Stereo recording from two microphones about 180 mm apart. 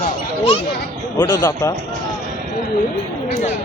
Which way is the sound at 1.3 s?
20° left (ahead or behind).